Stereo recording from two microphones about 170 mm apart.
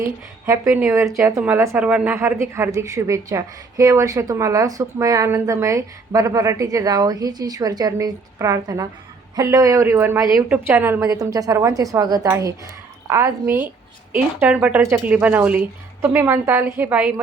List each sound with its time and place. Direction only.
0.4 s a woman's voice: 15° right (ahead or behind)